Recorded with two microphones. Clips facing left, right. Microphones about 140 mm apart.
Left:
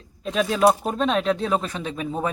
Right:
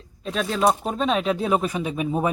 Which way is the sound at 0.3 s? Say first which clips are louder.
Left 3 dB; centre (ahead or behind).